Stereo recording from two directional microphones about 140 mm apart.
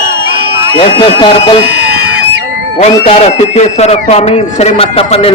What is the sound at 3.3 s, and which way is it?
A man's voice, 50° left (ahead or behind).